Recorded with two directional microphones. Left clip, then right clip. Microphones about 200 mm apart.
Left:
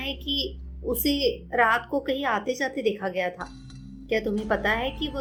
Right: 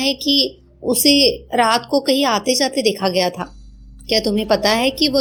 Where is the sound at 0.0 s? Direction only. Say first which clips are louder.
Right 12 dB; 25° right (ahead or behind).